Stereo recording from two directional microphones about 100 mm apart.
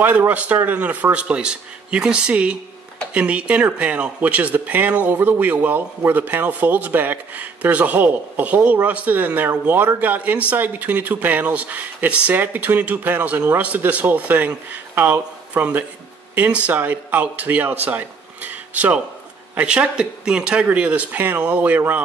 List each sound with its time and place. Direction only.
0.0 s speech: 20° right (ahead or behind)